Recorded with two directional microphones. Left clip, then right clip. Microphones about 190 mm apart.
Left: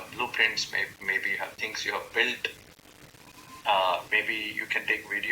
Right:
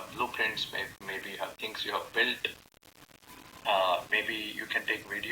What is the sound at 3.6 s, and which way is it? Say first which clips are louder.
Speech: left 2 dB; centre (ahead or behind).